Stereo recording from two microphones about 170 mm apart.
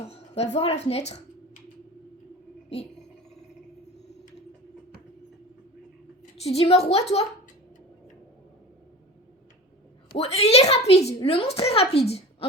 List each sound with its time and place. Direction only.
0.1 s a woman's voice: 40° left (ahead or behind)
6.4 s a woman's voice: 35° left (ahead or behind)
10.2 s a woman's voice: 35° left (ahead or behind)